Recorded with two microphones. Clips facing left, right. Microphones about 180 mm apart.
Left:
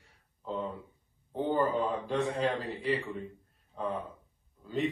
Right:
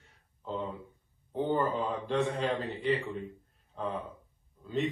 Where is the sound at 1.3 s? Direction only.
Centre (ahead or behind).